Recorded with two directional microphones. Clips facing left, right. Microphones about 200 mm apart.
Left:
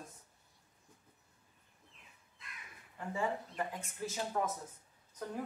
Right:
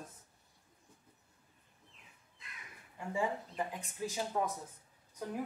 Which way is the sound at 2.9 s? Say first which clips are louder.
Right 1 dB; 10° right (ahead or behind).